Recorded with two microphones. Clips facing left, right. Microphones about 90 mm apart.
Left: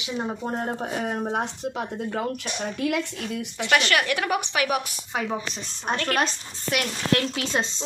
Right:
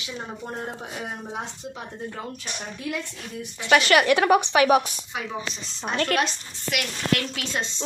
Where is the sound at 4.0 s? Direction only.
25° right (ahead or behind).